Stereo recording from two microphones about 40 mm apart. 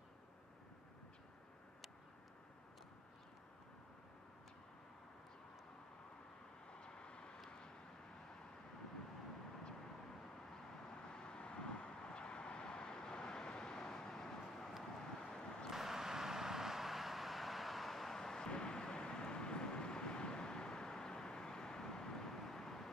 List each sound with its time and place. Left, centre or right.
6.8 s vehicle: left
10.9 s vehicle: left
15.7 s vehicle: centre